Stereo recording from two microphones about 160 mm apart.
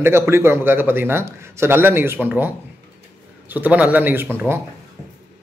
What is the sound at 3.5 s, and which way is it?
A man's voice, 10° right (ahead or behind).